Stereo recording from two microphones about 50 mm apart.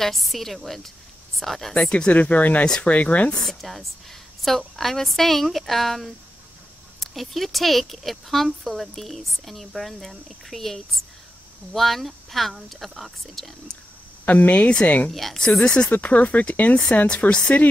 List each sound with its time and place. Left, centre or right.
0.0 s speech: centre
1.9 s speech: left
3.3 s speech: centre
14.2 s speech: left
15.0 s speech: centre
15.4 s speech: centre
15.9 s speech: left